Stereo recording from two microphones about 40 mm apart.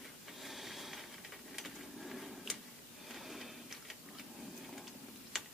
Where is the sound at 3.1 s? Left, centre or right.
Centre.